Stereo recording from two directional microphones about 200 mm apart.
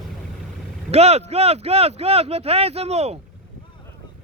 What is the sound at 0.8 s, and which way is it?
Speech, 30° right (ahead or behind).